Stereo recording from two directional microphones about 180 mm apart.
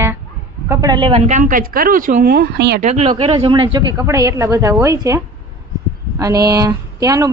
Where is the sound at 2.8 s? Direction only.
35° right (ahead or behind).